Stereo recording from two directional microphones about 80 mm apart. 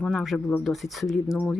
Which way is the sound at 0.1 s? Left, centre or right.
Centre.